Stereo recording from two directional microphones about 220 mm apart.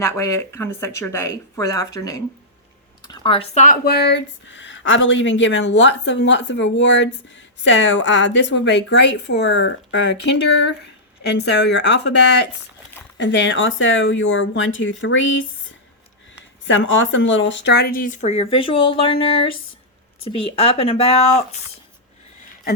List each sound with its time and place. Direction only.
0.0 s speech: 15° left (ahead or behind); by 10.2 s 55° left (ahead or behind)
11.3 s speech: 50° left (ahead or behind)
13.1 s speech: 55° left (ahead or behind)
16.6 s speech: 60° left (ahead or behind); by 21.4 s 30° left (ahead or behind)